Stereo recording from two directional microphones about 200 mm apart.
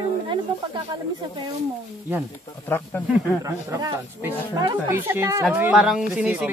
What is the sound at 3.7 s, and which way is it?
Speech, 15° right (ahead or behind).